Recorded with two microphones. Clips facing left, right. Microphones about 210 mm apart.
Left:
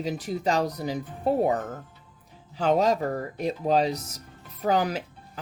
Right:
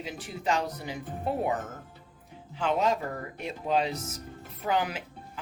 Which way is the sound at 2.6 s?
40° left (ahead or behind).